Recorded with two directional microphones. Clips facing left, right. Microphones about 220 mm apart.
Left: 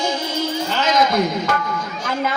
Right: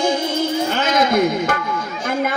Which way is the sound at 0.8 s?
55° right (ahead or behind).